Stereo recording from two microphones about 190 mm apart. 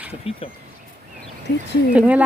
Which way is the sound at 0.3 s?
30° left (ahead or behind).